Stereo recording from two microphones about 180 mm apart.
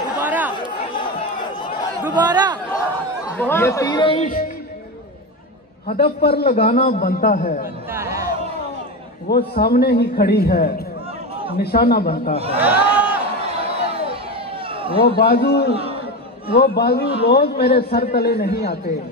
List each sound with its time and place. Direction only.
0.2 s chatter: 10° right (ahead or behind)
0.9 s crowd: 25° left (ahead or behind)
2.1 s speech: 20° right (ahead or behind)
2.9 s speech: 10° left (ahead or behind); by 4.3 s 30° left (ahead or behind)
5.9 s a man's voice: 60° left (ahead or behind)
7.9 s a sound: 15° right (ahead or behind)
9.3 s a man's voice: 60° left (ahead or behind)
12.5 s a sound: 10° right (ahead or behind)
14.7 s a sound: 30° right (ahead or behind)
15.0 s a man's voice: 60° left (ahead or behind)
15.7 s a man's voice: 30° right (ahead or behind)
16.5 s a man's voice: 65° left (ahead or behind)